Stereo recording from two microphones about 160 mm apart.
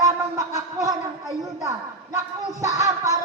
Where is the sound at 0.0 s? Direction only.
20° right (ahead or behind).